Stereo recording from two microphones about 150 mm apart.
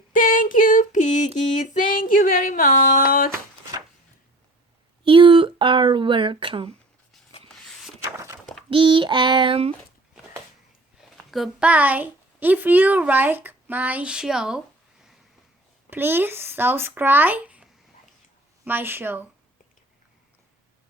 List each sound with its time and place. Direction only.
0.1 s female singing: 65° left (ahead or behind)
1.5 s a sound: 55° left (ahead or behind); by 3.3 s 75° left (ahead or behind)
5.0 s speech: 35° right (ahead or behind)
8.7 s child singing: 35° right (ahead or behind)
11.3 s a woman's voice: centre (ahead or behind)
15.9 s a woman's voice: 15° right (ahead or behind)